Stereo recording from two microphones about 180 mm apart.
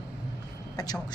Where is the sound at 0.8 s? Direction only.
20° left (ahead or behind).